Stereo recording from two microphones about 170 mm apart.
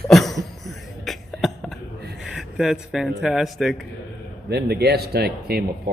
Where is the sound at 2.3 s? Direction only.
5° right (ahead or behind).